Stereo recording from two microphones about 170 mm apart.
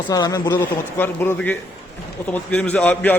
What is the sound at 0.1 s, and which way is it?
Speech, 20° left (ahead or behind).